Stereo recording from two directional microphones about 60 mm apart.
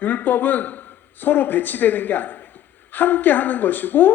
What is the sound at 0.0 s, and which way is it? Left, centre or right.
Speech, left.